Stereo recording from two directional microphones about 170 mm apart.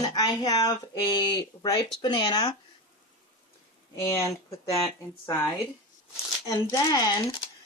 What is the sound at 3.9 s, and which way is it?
Speech, 15° left (ahead or behind).